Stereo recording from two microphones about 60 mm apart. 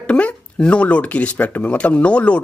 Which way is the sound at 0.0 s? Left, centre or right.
Left.